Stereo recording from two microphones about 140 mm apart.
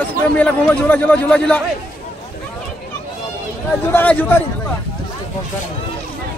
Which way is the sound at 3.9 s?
10° left (ahead or behind).